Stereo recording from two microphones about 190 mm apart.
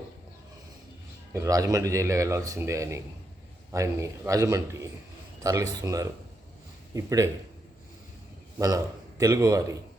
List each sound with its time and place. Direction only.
1.3 s speech: 15° right (ahead or behind)
8.5 s a man's voice: 15° right (ahead or behind)